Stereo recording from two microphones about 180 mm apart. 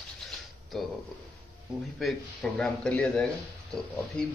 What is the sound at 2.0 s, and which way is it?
A man's voice, centre (ahead or behind).